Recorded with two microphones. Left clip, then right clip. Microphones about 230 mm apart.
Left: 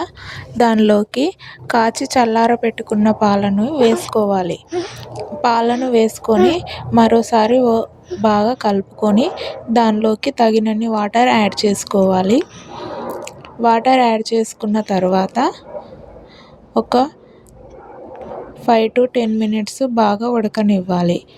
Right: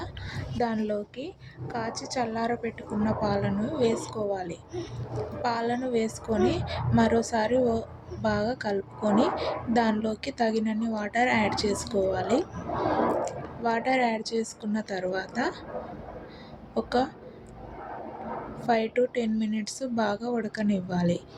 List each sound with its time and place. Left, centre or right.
0.0 s a woman's voice: left
16.7 s a woman's voice: left
18.6 s a woman's voice: left